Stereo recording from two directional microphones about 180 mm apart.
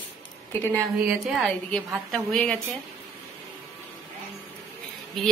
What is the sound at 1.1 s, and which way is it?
A woman's voice, centre (ahead or behind).